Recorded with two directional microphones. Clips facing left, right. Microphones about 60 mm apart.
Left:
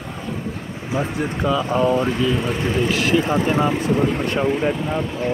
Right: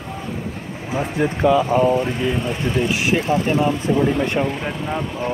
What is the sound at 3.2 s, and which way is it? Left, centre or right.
Speech, left.